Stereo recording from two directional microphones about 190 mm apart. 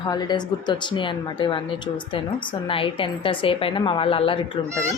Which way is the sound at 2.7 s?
25° left (ahead or behind).